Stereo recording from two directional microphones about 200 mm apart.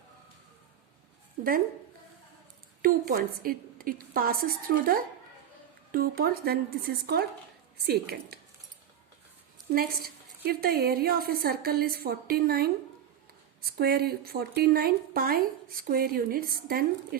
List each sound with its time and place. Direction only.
2.8 s a woman's voice: 45° right (ahead or behind)
9.7 s a woman's voice: 50° right (ahead or behind)